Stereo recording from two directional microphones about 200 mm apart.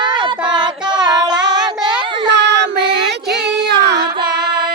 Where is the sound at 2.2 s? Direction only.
60° right (ahead or behind).